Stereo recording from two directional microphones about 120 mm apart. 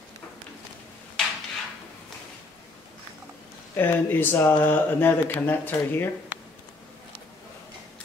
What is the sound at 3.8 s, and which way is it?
Speech, 20° left (ahead or behind).